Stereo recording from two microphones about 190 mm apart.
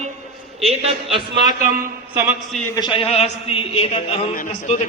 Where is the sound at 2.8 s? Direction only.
25° left (ahead or behind).